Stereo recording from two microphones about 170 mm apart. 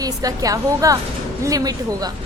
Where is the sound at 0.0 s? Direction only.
20° right (ahead or behind).